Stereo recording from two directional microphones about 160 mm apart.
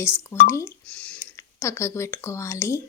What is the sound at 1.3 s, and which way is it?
Speech, 15° left (ahead or behind).